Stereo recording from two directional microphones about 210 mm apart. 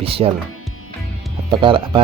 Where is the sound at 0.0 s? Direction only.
25° right (ahead or behind).